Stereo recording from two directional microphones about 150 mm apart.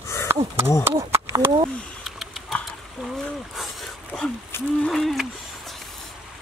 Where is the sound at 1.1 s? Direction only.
15° right (ahead or behind).